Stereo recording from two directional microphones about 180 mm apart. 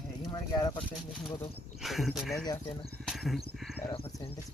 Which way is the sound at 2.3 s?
15° left (ahead or behind).